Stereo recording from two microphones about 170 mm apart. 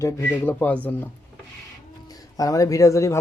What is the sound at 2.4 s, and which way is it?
Speech, 20° left (ahead or behind).